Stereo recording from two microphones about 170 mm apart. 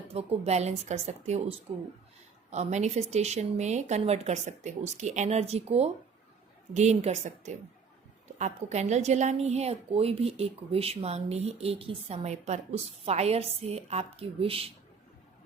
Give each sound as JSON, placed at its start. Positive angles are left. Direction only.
{"t": 0.1, "sound": "a woman's voice", "side_deg": -40}